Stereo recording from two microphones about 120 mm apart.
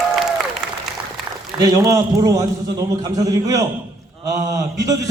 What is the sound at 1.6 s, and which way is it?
A man's voice, 30° right (ahead or behind).